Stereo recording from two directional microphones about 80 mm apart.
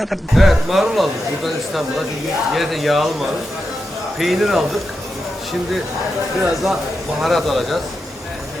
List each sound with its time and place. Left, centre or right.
0.0 s speech: centre
2.5 s speech: centre
6.5 s speech: centre